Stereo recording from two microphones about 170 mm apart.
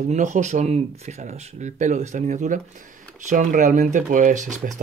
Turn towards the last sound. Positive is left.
turn(degrees=-45)  # may be behind; listen again after turning